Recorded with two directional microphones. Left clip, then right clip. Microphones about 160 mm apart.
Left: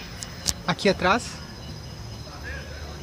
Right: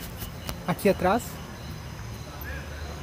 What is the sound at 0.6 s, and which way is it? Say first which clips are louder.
Speech: left 1 dB; centre (ahead or behind).